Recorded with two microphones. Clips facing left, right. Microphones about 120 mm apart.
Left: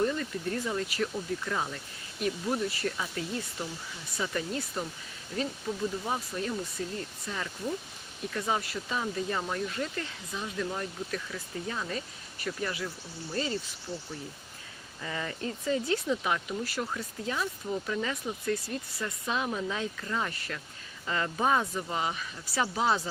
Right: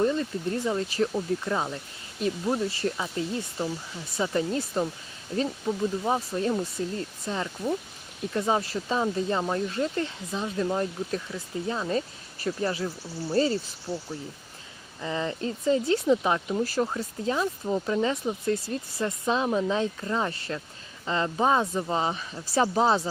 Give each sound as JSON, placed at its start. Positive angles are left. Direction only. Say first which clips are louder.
{"t": 0.0, "sound": "speech", "louder": "right 4 dB", "side_deg": -25}
{"t": 6.1, "sound": "speech", "louder": "right 7 dB", "side_deg": -30}
{"t": 13.9, "sound": "speech", "louder": "right 6 dB", "side_deg": -10}
{"t": 15.0, "sound": "speech", "louder": "right 6 dB", "side_deg": -25}